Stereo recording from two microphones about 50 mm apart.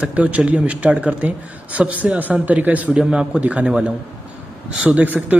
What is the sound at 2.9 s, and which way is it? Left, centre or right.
Speech, centre.